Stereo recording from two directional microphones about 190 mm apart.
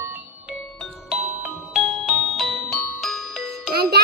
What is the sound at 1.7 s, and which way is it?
Music, centre (ahead or behind).